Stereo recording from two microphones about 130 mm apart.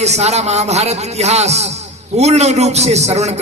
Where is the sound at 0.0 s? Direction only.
55° right (ahead or behind).